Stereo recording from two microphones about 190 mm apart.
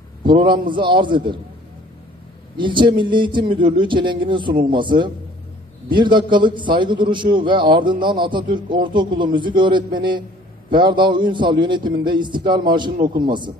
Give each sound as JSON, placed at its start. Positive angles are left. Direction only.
{"t": 0.2, "sound": "a man's voice", "side_deg": -25}
{"t": 2.5, "sound": "a man's voice", "side_deg": -25}